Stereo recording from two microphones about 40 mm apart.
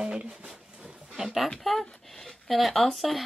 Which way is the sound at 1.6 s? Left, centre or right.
Centre.